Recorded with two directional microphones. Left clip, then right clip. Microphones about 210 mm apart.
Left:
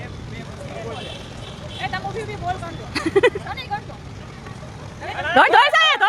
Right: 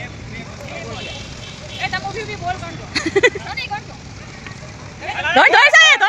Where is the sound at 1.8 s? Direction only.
45° right (ahead or behind).